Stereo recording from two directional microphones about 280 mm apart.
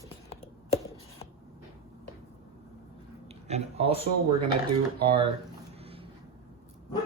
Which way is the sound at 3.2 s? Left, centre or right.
Right.